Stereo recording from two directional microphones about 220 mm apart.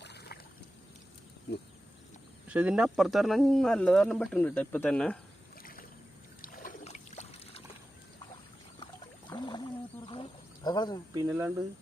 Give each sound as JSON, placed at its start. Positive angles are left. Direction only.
{"t": 0.0, "sound": "boat", "side_deg": 50}
{"t": 2.5, "sound": "speech", "side_deg": -5}
{"t": 6.4, "sound": "trickle", "side_deg": 40}
{"t": 9.3, "sound": "a sound", "side_deg": 20}
{"t": 11.1, "sound": "speech", "side_deg": -15}